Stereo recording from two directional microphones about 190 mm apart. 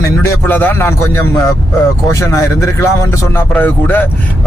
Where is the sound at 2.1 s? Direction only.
15° left (ahead or behind).